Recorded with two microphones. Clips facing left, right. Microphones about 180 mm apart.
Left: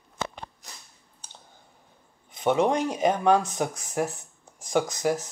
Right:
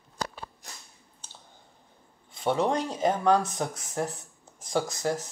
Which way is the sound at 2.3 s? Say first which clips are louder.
Left 3 dB; 20° left (ahead or behind).